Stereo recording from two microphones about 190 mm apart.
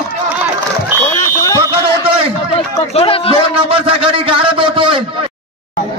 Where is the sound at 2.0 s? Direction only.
30° right (ahead or behind).